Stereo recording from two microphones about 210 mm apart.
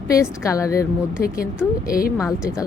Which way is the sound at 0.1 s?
15° left (ahead or behind).